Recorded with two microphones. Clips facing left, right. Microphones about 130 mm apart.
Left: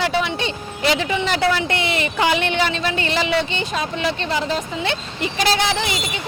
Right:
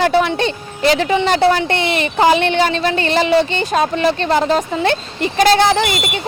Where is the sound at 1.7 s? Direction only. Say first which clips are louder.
Right 4 dB; 30° right (ahead or behind).